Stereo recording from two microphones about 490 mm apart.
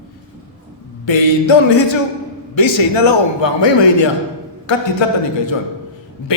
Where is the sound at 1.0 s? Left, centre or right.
Left.